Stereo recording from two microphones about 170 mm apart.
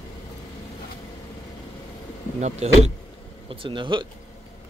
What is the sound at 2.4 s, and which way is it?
Speech, 40° right (ahead or behind).